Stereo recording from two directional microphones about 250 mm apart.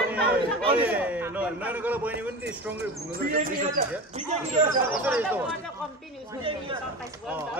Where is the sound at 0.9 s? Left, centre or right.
Centre.